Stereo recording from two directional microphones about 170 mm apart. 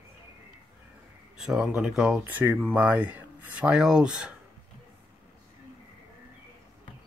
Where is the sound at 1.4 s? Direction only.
5° right (ahead or behind).